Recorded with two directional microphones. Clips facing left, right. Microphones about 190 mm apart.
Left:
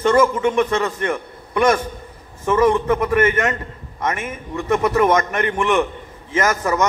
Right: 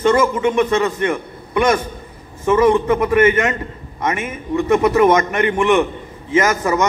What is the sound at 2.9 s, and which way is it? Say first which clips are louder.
Speech: right 3 dB; 15° right (ahead or behind).